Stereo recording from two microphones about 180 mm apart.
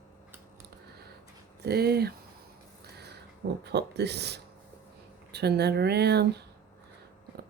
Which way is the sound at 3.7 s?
65° right (ahead or behind).